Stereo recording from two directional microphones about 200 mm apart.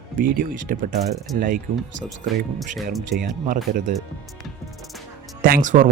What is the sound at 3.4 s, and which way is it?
Speech, 45° right (ahead or behind).